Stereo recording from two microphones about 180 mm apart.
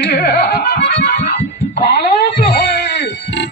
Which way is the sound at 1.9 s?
65° left (ahead or behind).